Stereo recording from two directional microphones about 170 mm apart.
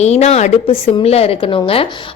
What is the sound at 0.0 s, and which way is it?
A woman's voice, 40° left (ahead or behind).